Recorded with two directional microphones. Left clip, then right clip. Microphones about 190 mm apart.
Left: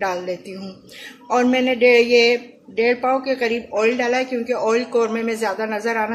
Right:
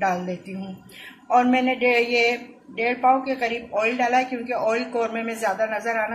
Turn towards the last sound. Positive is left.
turn(degrees=45)  # may be behind; listen again after turning